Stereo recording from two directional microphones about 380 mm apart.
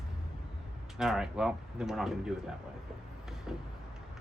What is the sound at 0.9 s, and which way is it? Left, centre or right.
Speech, centre.